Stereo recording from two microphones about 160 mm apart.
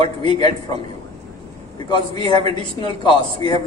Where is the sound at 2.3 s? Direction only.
40° right (ahead or behind).